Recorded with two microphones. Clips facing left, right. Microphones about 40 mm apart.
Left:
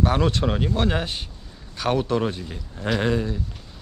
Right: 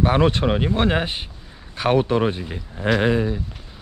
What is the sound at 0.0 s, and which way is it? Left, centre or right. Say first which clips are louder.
Speech: right 3 dB; right.